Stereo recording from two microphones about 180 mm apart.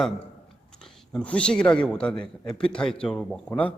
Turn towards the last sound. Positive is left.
turn(degrees=5)  # may be behind; listen again after turning